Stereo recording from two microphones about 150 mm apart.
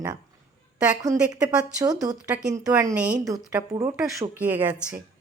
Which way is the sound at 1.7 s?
25° right (ahead or behind).